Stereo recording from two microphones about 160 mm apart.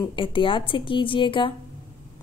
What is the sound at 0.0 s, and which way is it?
A woman's voice, 30° left (ahead or behind).